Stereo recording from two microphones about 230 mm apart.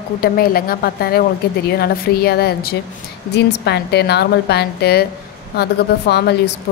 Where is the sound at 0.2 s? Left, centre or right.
Left.